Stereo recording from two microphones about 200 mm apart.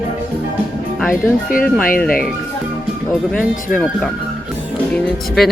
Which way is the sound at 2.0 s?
45° left (ahead or behind).